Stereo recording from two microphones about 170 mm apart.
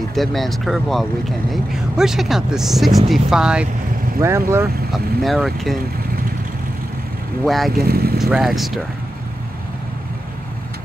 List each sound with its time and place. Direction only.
0.1 s speech: centre (ahead or behind)
4.2 s speech: 15° right (ahead or behind)
4.9 s speech: centre (ahead or behind)
7.4 s speech: centre (ahead or behind)
7.7 s speech: 65° right (ahead or behind)
8.2 s speech: centre (ahead or behind)